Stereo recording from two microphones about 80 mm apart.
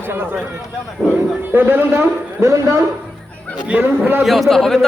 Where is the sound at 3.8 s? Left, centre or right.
Right.